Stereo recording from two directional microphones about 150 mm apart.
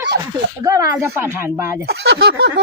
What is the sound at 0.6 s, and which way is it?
A woman's voice, 20° right (ahead or behind).